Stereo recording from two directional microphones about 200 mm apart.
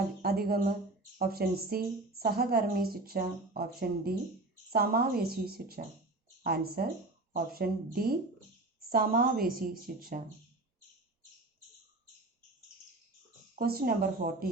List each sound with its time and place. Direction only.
0.2 s a woman's voice: 50° right (ahead or behind)
13.6 s speech: 50° right (ahead or behind)